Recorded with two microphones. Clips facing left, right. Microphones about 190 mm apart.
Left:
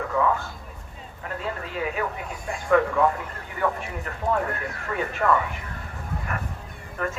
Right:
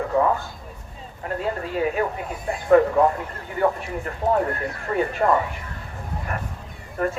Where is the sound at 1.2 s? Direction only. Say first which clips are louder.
Right 5 dB; 40° right (ahead or behind).